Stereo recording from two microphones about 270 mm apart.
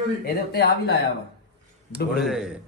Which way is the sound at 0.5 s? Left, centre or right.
Left.